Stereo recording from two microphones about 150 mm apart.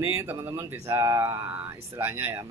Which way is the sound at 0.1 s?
20° right (ahead or behind).